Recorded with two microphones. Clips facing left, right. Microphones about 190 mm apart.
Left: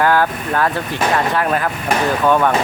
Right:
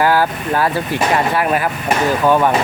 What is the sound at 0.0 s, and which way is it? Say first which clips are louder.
Speech: right 1 dB; 5° right (ahead or behind).